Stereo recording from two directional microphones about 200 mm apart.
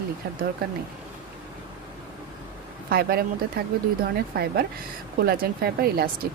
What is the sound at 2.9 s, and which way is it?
Speech, 50° right (ahead or behind).